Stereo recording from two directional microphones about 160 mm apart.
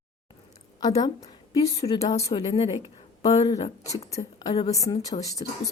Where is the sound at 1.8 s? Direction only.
40° left (ahead or behind).